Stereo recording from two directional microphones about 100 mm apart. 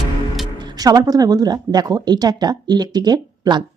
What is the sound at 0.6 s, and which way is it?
A woman's voice, 40° right (ahead or behind).